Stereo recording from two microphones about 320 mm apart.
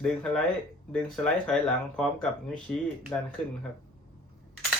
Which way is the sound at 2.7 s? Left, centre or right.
Centre.